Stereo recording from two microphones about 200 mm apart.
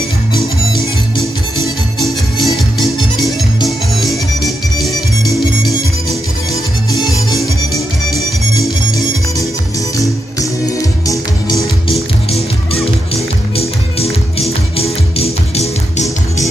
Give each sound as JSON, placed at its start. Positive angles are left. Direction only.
{"t": 2.0, "sound": "music", "side_deg": 0}
{"t": 3.6, "sound": "music", "side_deg": 0}
{"t": 11.9, "sound": "music", "side_deg": 30}